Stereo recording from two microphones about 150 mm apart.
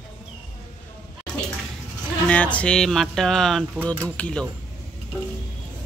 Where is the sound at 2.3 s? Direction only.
10° left (ahead or behind).